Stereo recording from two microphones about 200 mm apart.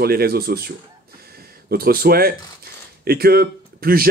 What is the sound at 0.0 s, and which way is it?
Speech, 50° right (ahead or behind).